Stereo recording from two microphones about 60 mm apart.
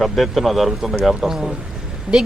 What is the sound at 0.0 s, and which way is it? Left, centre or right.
A man's voice, centre.